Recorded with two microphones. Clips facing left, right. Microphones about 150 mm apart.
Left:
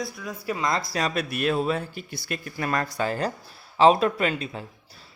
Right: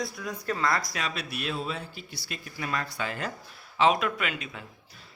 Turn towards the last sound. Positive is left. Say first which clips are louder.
# left 7 dB
turn(degrees=35)  # may be behind; listen again after turning